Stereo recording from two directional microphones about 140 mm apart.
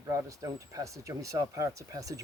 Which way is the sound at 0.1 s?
25° right (ahead or behind).